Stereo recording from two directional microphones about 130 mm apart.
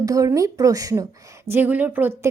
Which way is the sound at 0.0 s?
25° right (ahead or behind).